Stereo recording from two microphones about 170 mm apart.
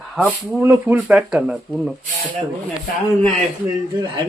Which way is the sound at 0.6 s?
10° right (ahead or behind).